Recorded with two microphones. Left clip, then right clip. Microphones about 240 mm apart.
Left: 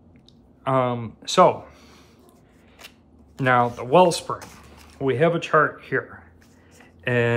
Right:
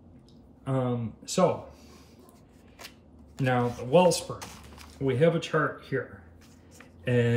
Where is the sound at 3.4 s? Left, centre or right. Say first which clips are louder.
Left 8 dB; centre.